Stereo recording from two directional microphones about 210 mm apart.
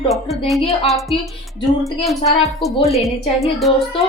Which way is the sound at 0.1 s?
Centre (ahead or behind).